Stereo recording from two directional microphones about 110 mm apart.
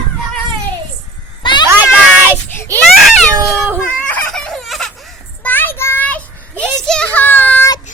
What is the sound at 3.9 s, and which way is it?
Fowl, 15° left (ahead or behind).